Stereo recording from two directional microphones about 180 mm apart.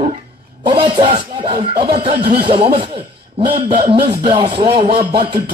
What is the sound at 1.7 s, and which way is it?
Speech, 60° right (ahead or behind).